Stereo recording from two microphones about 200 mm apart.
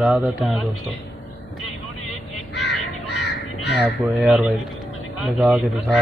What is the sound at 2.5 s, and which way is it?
Crow, 60° left (ahead or behind).